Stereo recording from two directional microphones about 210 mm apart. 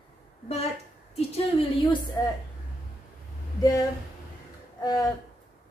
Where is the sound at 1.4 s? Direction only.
25° left (ahead or behind).